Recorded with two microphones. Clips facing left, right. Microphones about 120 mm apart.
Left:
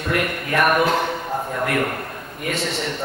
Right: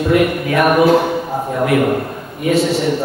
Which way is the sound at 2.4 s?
5° right (ahead or behind).